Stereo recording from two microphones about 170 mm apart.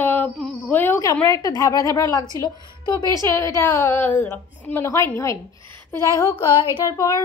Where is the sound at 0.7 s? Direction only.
10° left (ahead or behind).